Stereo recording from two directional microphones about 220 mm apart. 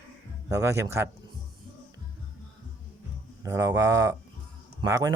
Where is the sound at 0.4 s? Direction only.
15° right (ahead or behind).